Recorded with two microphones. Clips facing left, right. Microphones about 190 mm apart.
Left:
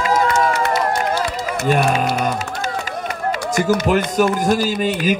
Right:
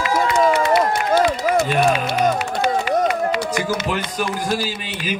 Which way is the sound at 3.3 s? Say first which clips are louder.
Left 3 dB; 45° left (ahead or behind).